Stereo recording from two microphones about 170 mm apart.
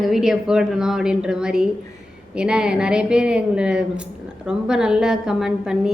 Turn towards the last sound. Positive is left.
turn(degrees=-5)  # may be behind; listen again after turning